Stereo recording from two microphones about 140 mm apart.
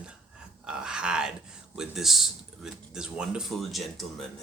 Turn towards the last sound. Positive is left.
turn(degrees=0)  # may be behind; listen again after turning